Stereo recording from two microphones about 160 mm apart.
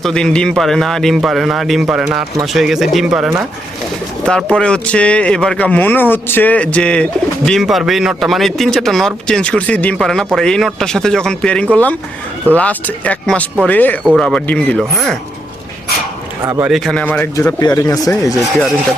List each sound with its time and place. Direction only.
0.0 s speech: 5° left (ahead or behind)
16.4 s a man's voice: 20° right (ahead or behind)
16.6 s speech: centre (ahead or behind)
17.3 s speech: 20° left (ahead or behind)